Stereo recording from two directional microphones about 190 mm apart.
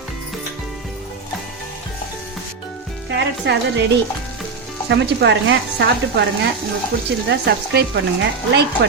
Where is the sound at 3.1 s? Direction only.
60° right (ahead or behind).